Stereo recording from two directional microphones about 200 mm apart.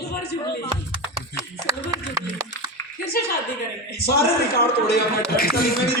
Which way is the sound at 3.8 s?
50° left (ahead or behind).